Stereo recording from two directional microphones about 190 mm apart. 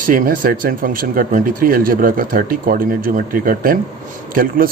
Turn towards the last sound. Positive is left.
turn(degrees=-50)  # may be behind; listen again after turning